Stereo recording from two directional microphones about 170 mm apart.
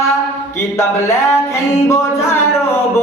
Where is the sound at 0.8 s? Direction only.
15° left (ahead or behind).